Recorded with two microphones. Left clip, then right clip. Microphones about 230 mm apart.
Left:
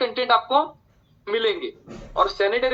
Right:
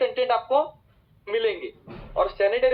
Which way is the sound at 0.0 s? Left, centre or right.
Left.